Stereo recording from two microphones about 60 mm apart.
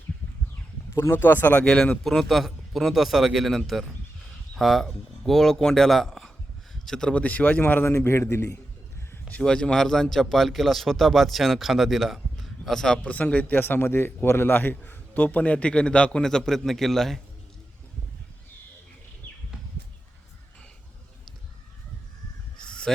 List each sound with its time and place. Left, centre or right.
1.1 s a man's voice: left
1.6 s speech: centre
2.0 s a man's voice: centre
7.1 s a man's voice: left
7.6 s a man's voice: left
9.4 s a man's voice: centre
13.0 s a man's voice: left; by 17.2 s centre
22.6 s a sound: centre